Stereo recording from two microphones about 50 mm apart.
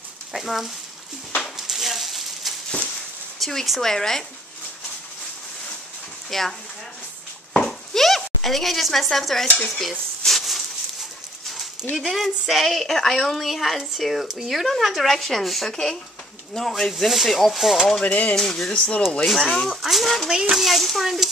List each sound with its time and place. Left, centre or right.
0.3 s a woman's voice: centre
1.4 s a sound: centre
3.3 s speech: centre
6.3 s a woman's voice: centre
7.6 s a sound: centre
8.4 s a woman's voice: centre
10.2 s a sound: centre
11.9 s a woman's voice: centre
18.0 s speech: left
18.3 s speech: centre
18.7 s speech: left
19.2 s a woman's voice: centre
20.2 s a child's voice: centre
20.5 s a woman's voice: centre